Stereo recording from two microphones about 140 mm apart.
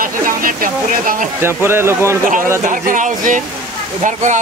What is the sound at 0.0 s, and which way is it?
Speech, 80° right.